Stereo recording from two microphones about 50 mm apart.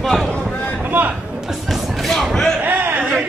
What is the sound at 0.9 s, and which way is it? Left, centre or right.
Speech, right.